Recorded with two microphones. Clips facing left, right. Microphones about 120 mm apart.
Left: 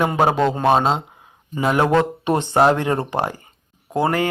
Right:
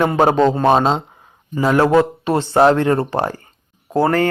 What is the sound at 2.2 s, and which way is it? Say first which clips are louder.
Speech: right 2 dB; 20° left (ahead or behind).